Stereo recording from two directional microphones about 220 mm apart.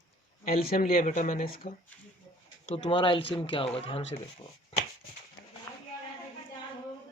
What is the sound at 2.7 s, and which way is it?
Speech, 25° left (ahead or behind).